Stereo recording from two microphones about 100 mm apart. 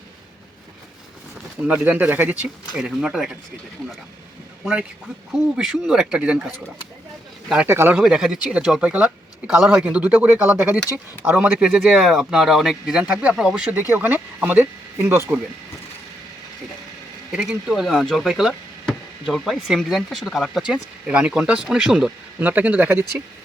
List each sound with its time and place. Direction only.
1.6 s speech: 15° right (ahead or behind)
2.7 s speech: 10° right (ahead or behind)
5.3 s speech: 5° right (ahead or behind)
7.7 s speech: 25° right (ahead or behind)
7.9 s speech: 5° right (ahead or behind); by 11.0 s 20° right (ahead or behind)
11.3 s speech: 10° right (ahead or behind)
13.9 s speech: 20° right (ahead or behind)
17.3 s speech: 5° right (ahead or behind)
22.4 s speech: 15° right (ahead or behind)